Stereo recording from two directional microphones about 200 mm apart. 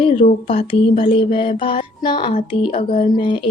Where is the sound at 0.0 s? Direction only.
25° left (ahead or behind).